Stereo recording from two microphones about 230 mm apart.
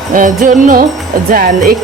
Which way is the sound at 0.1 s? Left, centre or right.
Right.